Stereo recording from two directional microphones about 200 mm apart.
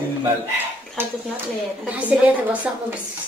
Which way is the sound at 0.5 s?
10° right (ahead or behind).